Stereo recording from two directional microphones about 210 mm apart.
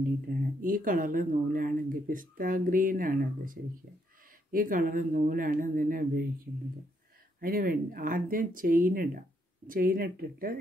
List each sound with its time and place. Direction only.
0.3 s speech: 40° right (ahead or behind)
7.3 s speech: 45° right (ahead or behind)